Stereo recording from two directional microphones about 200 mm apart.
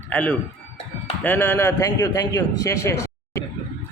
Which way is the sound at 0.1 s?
5° left (ahead or behind).